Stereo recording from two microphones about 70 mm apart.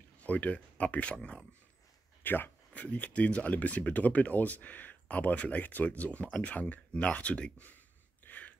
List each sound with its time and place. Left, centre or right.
0.2 s speech: left
2.2 s speech: left
8.3 s a sound: left